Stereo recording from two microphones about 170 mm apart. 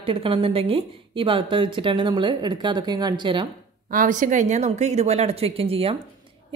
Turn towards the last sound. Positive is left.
turn(degrees=-35)  # may be behind; listen again after turning